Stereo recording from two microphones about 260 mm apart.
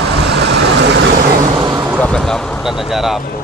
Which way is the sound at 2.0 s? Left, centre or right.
Centre.